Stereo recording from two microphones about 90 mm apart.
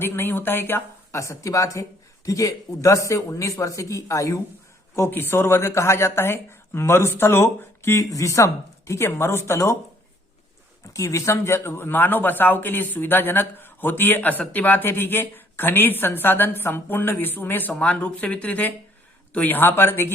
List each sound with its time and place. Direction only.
0.0 s speech: 25° left (ahead or behind)
4.9 s speech: 25° left (ahead or behind)
10.9 s speech: 35° left (ahead or behind)